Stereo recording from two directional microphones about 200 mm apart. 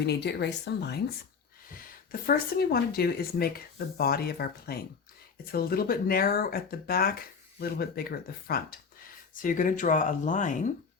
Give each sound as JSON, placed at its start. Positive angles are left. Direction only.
{"t": 0.0, "sound": "a woman's voice", "side_deg": 55}
{"t": 1.7, "sound": "speech", "side_deg": 45}